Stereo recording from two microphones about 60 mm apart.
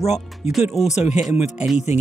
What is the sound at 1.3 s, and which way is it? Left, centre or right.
Speech, right.